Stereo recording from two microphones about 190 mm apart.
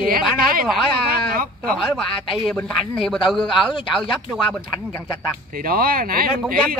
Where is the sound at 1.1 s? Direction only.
50° right (ahead or behind).